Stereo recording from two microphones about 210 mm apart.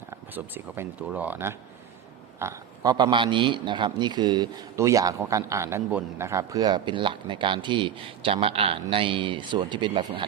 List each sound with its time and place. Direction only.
0.1 s a man's voice: 10° right (ahead or behind)